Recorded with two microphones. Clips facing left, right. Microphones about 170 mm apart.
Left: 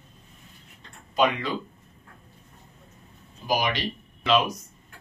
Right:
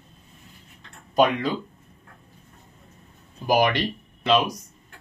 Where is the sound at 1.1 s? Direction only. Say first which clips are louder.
Right 3 dB; 45° right (ahead or behind).